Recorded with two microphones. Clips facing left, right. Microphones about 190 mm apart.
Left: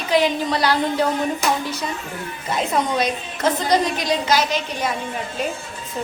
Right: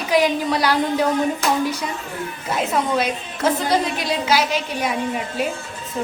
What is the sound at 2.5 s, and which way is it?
A woman's voice, 5° right (ahead or behind).